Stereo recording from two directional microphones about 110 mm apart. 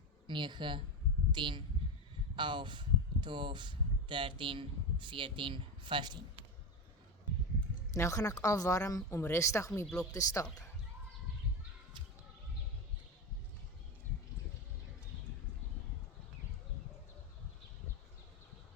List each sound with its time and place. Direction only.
0.3 s speech: 45° right (ahead or behind)
7.9 s a woman's voice: 30° left (ahead or behind)
9.8 s speech: 5° left (ahead or behind)
10.1 s speech: 30° left (ahead or behind)